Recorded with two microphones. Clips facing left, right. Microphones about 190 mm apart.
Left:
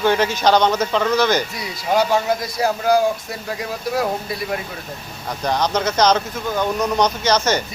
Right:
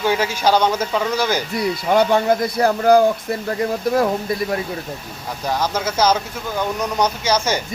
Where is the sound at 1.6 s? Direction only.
55° right (ahead or behind).